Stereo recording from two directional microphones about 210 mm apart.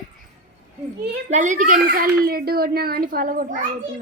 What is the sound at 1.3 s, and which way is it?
A woman's voice, 35° right (ahead or behind).